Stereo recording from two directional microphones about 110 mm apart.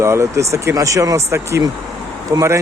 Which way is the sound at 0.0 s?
25° right (ahead or behind).